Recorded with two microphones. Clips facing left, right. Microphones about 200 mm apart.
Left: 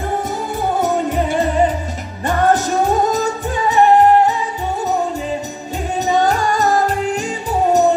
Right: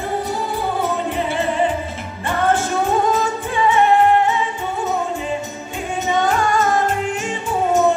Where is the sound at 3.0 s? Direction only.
40° left (ahead or behind).